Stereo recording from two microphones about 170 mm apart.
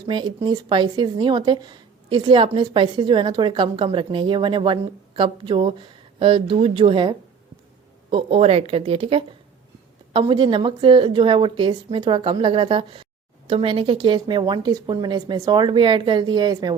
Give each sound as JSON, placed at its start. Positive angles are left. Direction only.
{"t": 0.1, "sound": "speech", "side_deg": -30}